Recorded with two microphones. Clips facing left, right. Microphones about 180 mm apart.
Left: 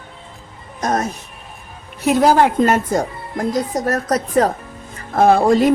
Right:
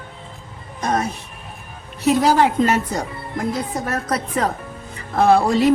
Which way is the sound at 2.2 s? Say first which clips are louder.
Left 4 dB; 50° left (ahead or behind).